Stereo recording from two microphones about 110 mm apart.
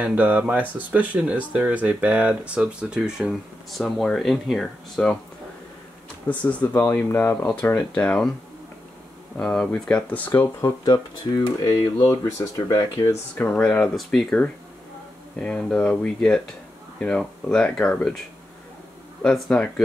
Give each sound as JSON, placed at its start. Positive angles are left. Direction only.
{"t": 0.0, "sound": "speech", "side_deg": -15}
{"t": 6.2, "sound": "speech", "side_deg": 20}
{"t": 7.9, "sound": "speech", "side_deg": 10}
{"t": 9.4, "sound": "speech", "side_deg": 10}
{"t": 11.6, "sound": "speech", "side_deg": 40}
{"t": 13.3, "sound": "speech", "side_deg": 15}
{"t": 19.2, "sound": "speech", "side_deg": 5}